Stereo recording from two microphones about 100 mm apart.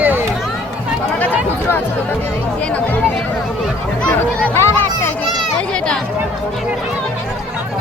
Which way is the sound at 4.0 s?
10° left (ahead or behind).